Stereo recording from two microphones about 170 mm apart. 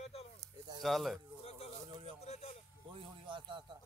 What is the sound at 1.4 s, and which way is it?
Speech, 35° left (ahead or behind).